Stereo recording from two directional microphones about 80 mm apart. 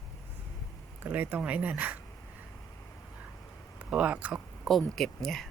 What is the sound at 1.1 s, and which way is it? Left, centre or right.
Speech, right.